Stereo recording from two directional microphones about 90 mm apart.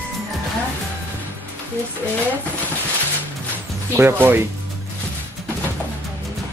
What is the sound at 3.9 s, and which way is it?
Speech, 25° right (ahead or behind).